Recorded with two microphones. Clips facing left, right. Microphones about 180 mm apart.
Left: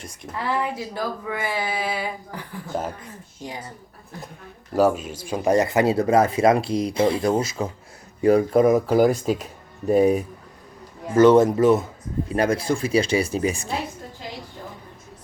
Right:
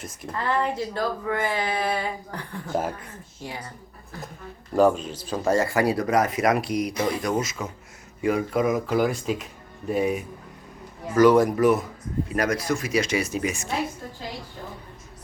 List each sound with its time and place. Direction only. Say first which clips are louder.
0.0 s a woman's voice: right 2 dB; 5° right (ahead or behind)
0.3 s speech: right 1 dB; 10° left (ahead or behind)
4.7 s speech: even; 5° left (ahead or behind); by 10.2 s 35° left (ahead or behind)
11.1 s speech: left 3 dB; 25° left (ahead or behind)